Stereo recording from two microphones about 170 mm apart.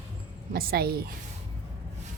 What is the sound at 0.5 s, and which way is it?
Speech, 65° right (ahead or behind).